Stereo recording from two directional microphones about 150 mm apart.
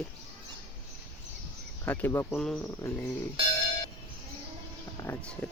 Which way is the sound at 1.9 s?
15° left (ahead or behind).